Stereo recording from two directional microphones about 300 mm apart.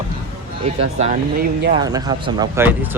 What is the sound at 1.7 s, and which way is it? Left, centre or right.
Speech, centre.